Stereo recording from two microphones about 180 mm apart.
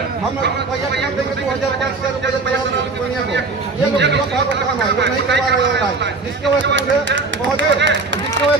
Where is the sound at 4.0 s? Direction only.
75° right (ahead or behind).